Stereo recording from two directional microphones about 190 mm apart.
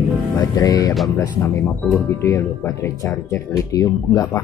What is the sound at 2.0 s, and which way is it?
Speech, 15° left (ahead or behind).